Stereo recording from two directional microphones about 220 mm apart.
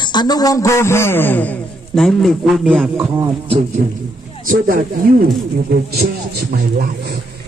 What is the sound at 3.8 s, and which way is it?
Speech, 35° right (ahead or behind).